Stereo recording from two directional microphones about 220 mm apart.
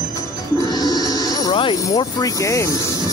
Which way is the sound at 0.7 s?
15° left (ahead or behind).